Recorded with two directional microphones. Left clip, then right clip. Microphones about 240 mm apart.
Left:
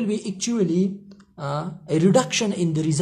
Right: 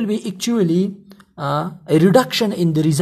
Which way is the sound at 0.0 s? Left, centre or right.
Right.